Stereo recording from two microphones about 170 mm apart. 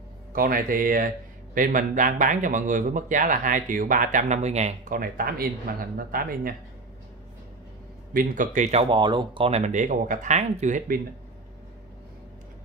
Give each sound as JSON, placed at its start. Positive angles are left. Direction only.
{"t": 0.3, "sound": "a man's voice", "side_deg": -60}
{"t": 4.9, "sound": "speech", "side_deg": -55}
{"t": 8.1, "sound": "a man's voice", "side_deg": -55}